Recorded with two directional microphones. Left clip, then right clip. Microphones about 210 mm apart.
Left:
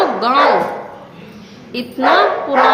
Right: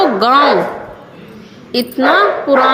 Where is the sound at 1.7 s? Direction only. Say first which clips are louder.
Right 1 dB; 30° right (ahead or behind).